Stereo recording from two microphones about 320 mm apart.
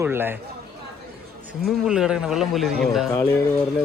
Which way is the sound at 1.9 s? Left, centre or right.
Centre.